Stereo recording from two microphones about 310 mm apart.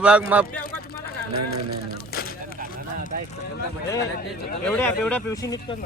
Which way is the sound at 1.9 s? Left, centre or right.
Left.